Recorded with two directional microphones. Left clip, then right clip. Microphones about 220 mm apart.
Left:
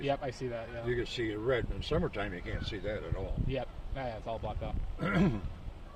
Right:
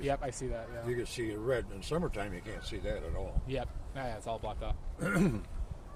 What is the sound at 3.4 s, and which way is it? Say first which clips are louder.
Speech: even; 10° left (ahead or behind).